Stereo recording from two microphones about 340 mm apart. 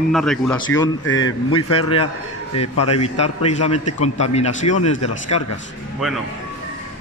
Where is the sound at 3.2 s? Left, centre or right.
Left.